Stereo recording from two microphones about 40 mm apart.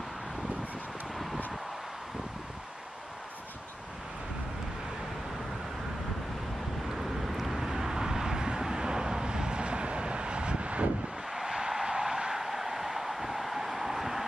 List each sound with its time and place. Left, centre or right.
1.1 s vehicle: centre
6.9 s vehicle: centre; by 10.9 s right
11.2 s vehicle: centre